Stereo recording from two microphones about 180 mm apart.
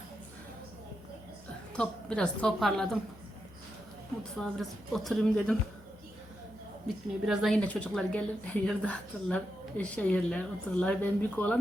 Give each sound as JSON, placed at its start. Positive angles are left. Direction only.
{"t": 1.7, "sound": "a woman's voice", "side_deg": 5}
{"t": 4.2, "sound": "a woman's voice", "side_deg": 5}
{"t": 6.8, "sound": "a woman's voice", "side_deg": 0}